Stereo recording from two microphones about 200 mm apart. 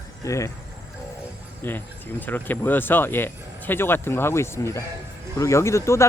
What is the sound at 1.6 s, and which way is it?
Speech, 10° left (ahead or behind).